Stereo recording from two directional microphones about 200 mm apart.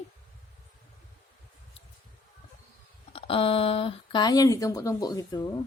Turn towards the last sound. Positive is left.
turn(degrees=20)  # may be behind; listen again after turning